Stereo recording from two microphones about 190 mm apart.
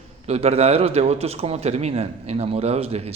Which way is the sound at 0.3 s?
35° right (ahead or behind).